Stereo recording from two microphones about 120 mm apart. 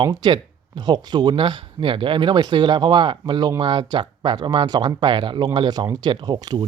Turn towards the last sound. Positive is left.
turn(degrees=-35)  # may be behind; listen again after turning